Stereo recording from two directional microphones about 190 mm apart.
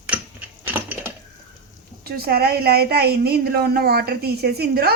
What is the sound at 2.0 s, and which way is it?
A woman's voice, 55° right (ahead or behind).